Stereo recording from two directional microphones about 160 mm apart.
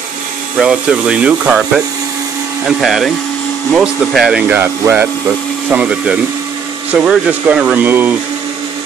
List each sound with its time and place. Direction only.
0.6 s speech: 5° right (ahead or behind)